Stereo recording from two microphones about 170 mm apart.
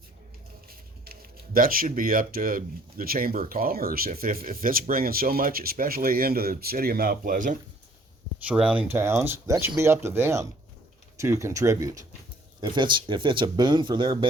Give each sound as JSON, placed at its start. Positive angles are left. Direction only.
{"t": 0.7, "sound": "speech", "side_deg": -60}
{"t": 8.4, "sound": "speech", "side_deg": -5}